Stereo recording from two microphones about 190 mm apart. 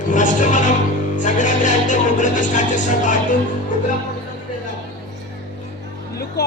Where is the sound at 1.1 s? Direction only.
40° left (ahead or behind).